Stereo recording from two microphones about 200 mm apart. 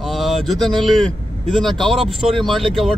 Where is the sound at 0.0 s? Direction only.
Centre (ahead or behind).